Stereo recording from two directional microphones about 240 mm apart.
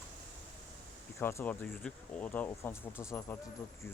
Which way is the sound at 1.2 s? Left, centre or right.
Centre.